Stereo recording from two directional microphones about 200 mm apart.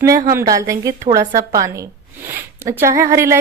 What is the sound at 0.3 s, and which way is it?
Speech, 15° right (ahead or behind).